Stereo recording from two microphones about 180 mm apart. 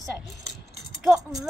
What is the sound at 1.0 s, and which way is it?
Speech, centre (ahead or behind).